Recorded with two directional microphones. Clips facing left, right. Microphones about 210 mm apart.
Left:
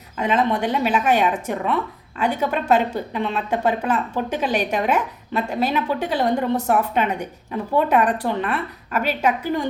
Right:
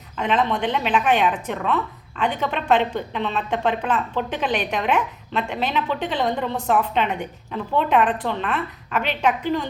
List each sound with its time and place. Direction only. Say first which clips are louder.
0.2 s a woman's voice: left 2 dB; 10° left (ahead or behind)
4.3 s a woman's voice: left 2 dB; 40° left (ahead or behind)
4.9 s a woman's voice: left 1 dB; 5° left (ahead or behind)